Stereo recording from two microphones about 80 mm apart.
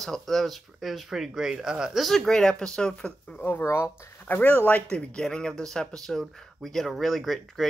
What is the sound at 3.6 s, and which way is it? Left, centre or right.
Speech, left.